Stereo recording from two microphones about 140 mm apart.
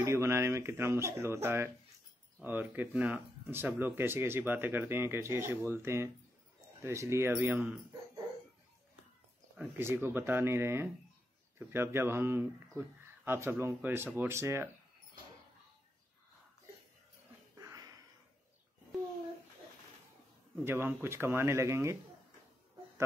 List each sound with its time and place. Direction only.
0.0 s speech: 20° right (ahead or behind)
9.6 s speech: 15° right (ahead or behind)
17.6 s a sound: 25° right (ahead or behind)
20.6 s speech: 15° right (ahead or behind)